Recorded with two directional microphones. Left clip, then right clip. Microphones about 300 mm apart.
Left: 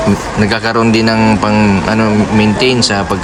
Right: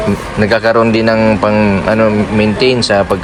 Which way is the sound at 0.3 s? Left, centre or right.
Centre.